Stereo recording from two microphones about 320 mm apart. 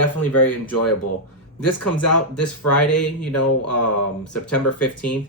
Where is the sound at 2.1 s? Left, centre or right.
Left.